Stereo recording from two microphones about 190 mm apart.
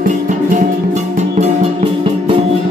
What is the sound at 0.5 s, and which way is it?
Music, 35° right (ahead or behind).